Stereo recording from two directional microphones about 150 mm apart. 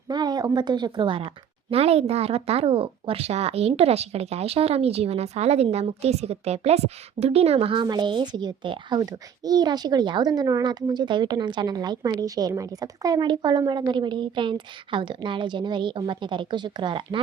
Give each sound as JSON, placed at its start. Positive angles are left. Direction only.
{"t": 0.1, "sound": "speech", "side_deg": -30}